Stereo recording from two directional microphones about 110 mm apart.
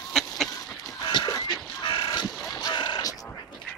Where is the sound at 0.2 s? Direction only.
5° left (ahead or behind).